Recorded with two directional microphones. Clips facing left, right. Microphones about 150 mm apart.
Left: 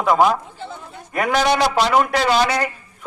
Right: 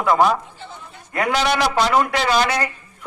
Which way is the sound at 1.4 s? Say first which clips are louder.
Left 2 dB; 20° left (ahead or behind).